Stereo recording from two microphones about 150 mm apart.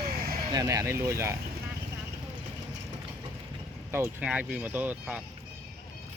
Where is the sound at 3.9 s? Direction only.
15° right (ahead or behind).